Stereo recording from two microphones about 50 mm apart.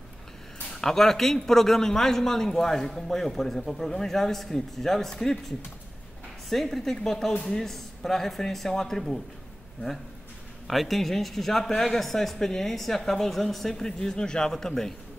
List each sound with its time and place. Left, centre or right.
0.7 s a man's voice: centre
6.5 s a man's voice: centre
10.7 s a man's voice: centre